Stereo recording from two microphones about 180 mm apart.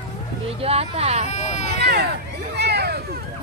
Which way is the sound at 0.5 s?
35° right (ahead or behind).